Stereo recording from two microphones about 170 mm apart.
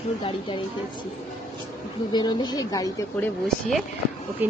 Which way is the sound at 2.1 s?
25° left (ahead or behind).